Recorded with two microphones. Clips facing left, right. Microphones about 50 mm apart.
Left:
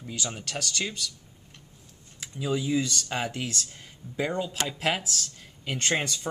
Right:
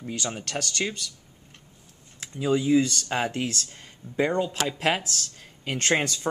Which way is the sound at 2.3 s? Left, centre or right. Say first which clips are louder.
Right 6 dB; centre.